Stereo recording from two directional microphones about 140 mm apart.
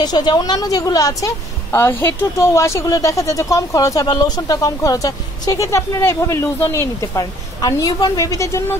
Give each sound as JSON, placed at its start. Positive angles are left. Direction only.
{"t": 0.0, "sound": "a woman's voice", "side_deg": 30}